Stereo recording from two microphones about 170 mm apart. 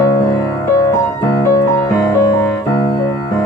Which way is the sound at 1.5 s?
25° left (ahead or behind).